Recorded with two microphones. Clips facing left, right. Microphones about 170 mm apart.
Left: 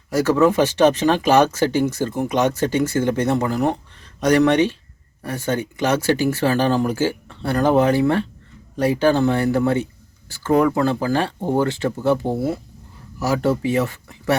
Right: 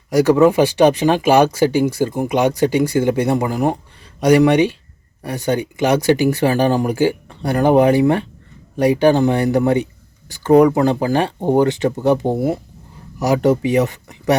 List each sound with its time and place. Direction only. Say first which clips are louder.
0.1 s speech: right 4 dB; 15° right (ahead or behind)